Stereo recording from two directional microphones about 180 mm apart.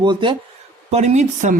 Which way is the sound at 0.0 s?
25° right (ahead or behind).